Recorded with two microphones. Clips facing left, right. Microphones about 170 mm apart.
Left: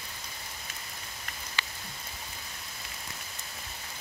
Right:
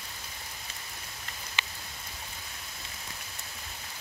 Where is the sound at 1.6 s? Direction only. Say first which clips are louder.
Even; 20° right (ahead or behind).